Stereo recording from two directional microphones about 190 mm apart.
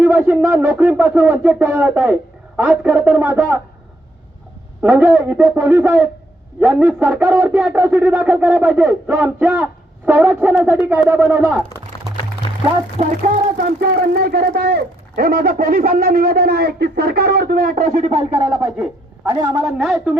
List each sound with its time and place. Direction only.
0.0 s a man's voice: 10° right (ahead or behind)
4.8 s a man's voice: 10° right (ahead or behind)
13.0 s speech: 45° right (ahead or behind)
19.2 s a man's voice: 20° right (ahead or behind)
19.8 s a woman's voice: 5° right (ahead or behind)